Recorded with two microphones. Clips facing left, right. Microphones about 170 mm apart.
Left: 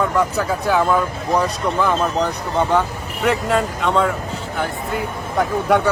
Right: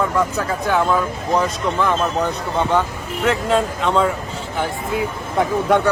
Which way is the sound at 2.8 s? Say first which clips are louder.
Even; centre (ahead or behind).